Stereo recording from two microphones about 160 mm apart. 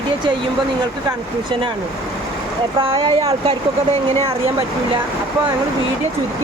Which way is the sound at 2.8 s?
35° right (ahead or behind).